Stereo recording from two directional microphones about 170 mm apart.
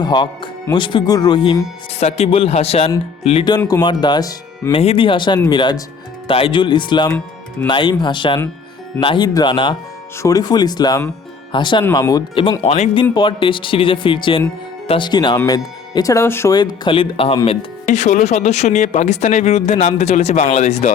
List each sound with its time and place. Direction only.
0.0 s speech: 25° left (ahead or behind)
4.7 s speech: 35° left (ahead or behind)
17.8 s speech: 45° left (ahead or behind)